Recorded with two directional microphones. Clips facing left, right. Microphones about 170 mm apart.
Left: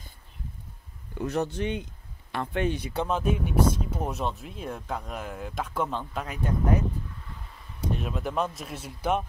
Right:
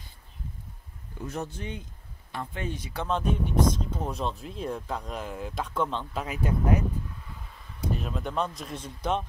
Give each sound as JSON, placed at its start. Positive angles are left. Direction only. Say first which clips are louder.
{"t": 1.1, "sound": "speech", "louder": "left 6 dB", "side_deg": 70}
{"t": 3.1, "sound": "speech", "louder": "right 1 dB", "side_deg": 5}
{"t": 6.2, "sound": "speech", "louder": "right 1 dB", "side_deg": -5}
{"t": 7.9, "sound": "speech", "louder": "left 1 dB", "side_deg": 0}